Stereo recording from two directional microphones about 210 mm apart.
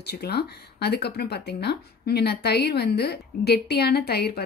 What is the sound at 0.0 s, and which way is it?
Speech, 50° left (ahead or behind).